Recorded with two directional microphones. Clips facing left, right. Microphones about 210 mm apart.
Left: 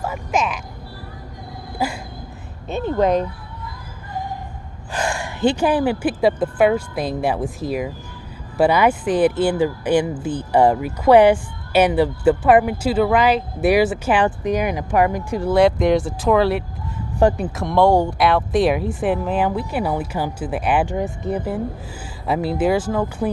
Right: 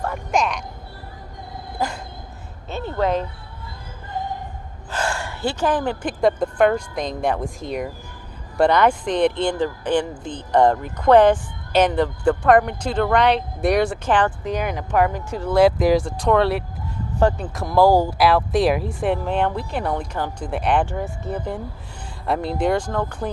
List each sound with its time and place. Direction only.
0.0 s speech: centre (ahead or behind)
1.8 s speech: 10° left (ahead or behind)
4.9 s speech: 15° left (ahead or behind)
15.5 s speech: centre (ahead or behind)
17.2 s speech: 15° left (ahead or behind)
17.5 s speech: centre (ahead or behind)
20.8 s speech: 15° left (ahead or behind)